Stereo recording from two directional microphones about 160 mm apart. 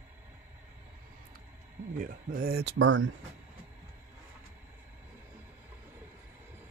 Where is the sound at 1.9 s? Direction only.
60° right (ahead or behind); by 2.7 s 75° right (ahead or behind).